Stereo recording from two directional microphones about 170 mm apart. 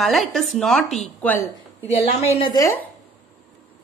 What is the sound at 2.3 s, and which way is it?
Speech, 25° left (ahead or behind).